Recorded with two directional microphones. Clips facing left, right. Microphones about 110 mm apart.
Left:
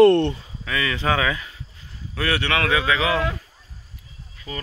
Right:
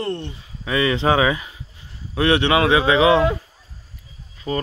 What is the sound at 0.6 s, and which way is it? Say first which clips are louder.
Speech: right 5 dB; 25° right (ahead or behind).